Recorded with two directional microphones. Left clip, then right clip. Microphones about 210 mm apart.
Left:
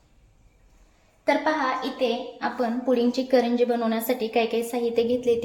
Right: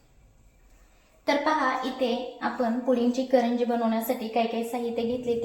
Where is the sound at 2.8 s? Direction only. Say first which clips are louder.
Left 3 dB; 45° left (ahead or behind).